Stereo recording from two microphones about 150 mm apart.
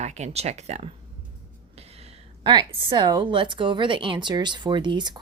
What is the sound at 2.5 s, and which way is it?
Speech, 35° right (ahead or behind).